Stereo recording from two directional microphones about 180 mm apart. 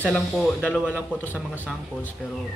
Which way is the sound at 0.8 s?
10° left (ahead or behind).